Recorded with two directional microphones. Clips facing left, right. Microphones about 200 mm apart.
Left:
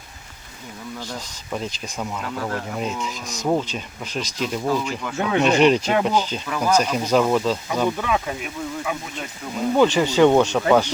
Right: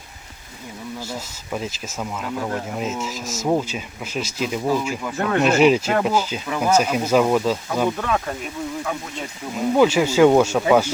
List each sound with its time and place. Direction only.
1.1 s speech: 5° right (ahead or behind)
2.3 s speech: 15° right (ahead or behind)
2.7 s speech: 5° right (ahead or behind)
9.6 s speech: 5° right (ahead or behind)